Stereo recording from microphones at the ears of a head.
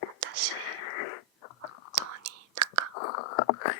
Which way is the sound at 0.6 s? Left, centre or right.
Left.